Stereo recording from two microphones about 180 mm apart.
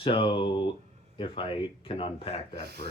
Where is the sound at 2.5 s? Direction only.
65° right (ahead or behind).